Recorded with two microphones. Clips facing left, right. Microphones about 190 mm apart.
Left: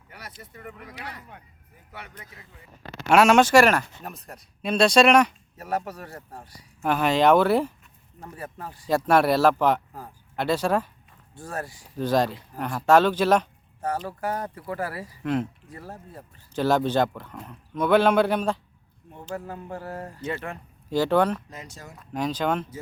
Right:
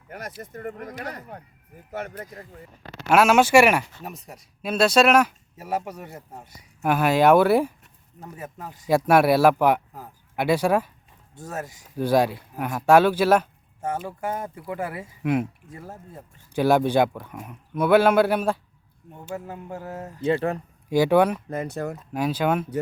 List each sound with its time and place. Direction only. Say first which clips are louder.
0.1 s speech: right 8 dB; 45° right (ahead or behind)
3.1 s speech: even; 5° right (ahead or behind)
14.2 s speech: even; 25° right (ahead or behind)
14.6 s speech: right 1 dB; 15° right (ahead or behind)
16.6 s speech: right 3 dB; 10° right (ahead or behind)
20.2 s speech: right 10 dB; 35° right (ahead or behind)
20.9 s speech: right 3 dB; 10° right (ahead or behind)
21.5 s speech: right 14 dB; 55° right (ahead or behind)
22.1 s speech: right 2 dB; 10° right (ahead or behind)